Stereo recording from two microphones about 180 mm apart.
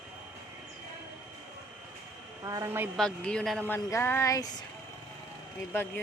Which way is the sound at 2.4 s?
20° right (ahead or behind).